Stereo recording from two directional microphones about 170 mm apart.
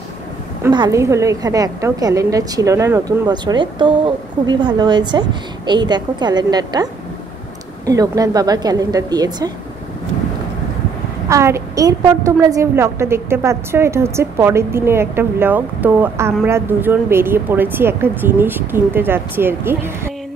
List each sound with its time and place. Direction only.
0.7 s a woman's voice: 20° right (ahead or behind)
11.2 s a woman's voice: 15° right (ahead or behind)